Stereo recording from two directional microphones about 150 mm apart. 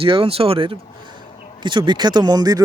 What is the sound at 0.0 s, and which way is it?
A man's voice, 35° right (ahead or behind).